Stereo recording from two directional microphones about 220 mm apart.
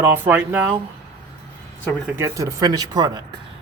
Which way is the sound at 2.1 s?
15° right (ahead or behind).